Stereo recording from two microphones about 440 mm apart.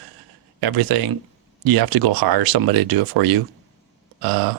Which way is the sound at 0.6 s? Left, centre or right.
Right.